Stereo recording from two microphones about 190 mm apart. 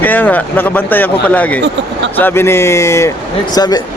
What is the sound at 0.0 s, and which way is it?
Speech, 10° left (ahead or behind).